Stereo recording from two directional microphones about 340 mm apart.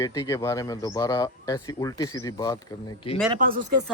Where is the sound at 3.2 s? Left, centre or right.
Right.